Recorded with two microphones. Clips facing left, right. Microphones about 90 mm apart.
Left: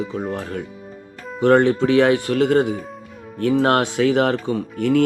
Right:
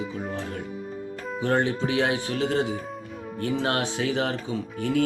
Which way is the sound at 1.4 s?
60° left (ahead or behind).